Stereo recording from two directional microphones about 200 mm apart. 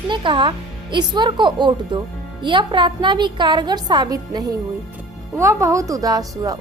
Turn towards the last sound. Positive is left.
turn(degrees=-20)  # may be behind; listen again after turning